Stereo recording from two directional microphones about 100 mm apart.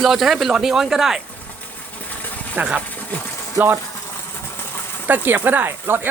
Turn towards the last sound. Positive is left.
turn(degrees=-20)  # may be behind; listen again after turning